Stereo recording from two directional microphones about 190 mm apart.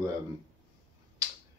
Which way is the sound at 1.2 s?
20° right (ahead or behind).